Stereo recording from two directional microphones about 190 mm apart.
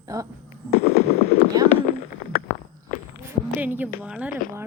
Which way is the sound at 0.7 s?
35° left (ahead or behind).